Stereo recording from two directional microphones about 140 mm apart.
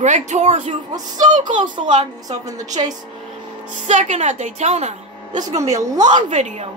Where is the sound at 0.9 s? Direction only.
30° right (ahead or behind).